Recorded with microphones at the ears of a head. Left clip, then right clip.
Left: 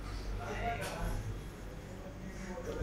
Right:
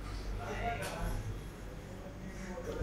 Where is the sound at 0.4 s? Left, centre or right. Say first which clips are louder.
Even; centre.